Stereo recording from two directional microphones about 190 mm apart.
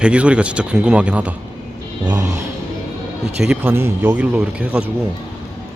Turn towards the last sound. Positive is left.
turn(degrees=-5)  # may be behind; listen again after turning